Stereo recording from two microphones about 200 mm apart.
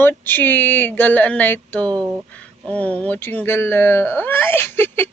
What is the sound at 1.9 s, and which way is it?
Speech, 15° right (ahead or behind).